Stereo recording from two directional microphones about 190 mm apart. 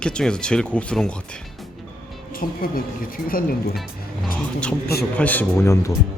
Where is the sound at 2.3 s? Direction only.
50° left (ahead or behind).